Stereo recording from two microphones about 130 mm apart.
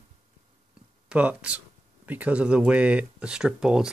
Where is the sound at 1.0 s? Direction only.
10° right (ahead or behind).